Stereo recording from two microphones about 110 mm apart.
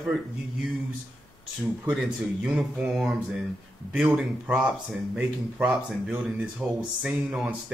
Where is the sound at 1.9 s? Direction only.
Centre (ahead or behind).